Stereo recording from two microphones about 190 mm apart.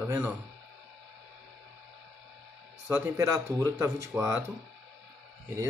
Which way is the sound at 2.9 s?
15° right (ahead or behind).